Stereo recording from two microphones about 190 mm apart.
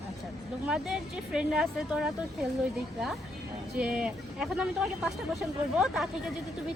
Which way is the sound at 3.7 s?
5° right (ahead or behind).